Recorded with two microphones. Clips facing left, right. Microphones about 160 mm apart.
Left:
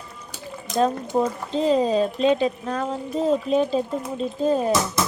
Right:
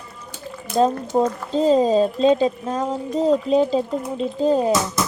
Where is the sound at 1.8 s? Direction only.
25° right (ahead or behind).